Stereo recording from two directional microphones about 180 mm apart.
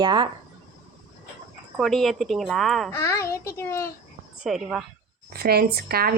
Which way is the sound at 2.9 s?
15° left (ahead or behind).